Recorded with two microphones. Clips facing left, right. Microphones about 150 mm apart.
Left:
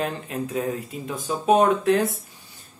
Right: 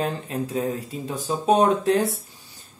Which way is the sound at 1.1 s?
35° right (ahead or behind).